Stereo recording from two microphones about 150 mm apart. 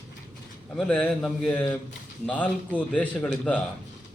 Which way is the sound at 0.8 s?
5° left (ahead or behind).